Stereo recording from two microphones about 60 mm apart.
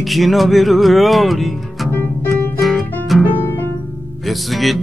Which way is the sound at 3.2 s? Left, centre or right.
Left.